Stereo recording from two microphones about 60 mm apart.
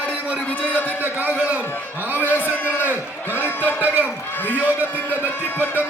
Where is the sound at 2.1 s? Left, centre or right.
Left.